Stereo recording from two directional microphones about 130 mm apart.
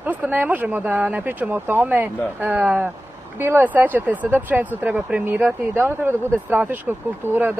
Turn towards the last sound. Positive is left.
turn(degrees=-15)  # may be behind; listen again after turning